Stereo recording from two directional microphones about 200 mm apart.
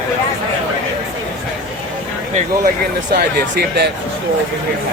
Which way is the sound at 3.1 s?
50° right (ahead or behind).